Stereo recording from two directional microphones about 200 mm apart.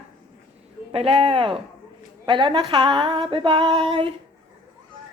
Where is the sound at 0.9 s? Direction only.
25° right (ahead or behind).